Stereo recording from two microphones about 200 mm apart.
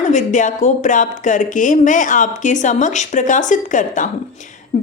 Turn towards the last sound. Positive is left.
turn(degrees=40)  # may be behind; listen again after turning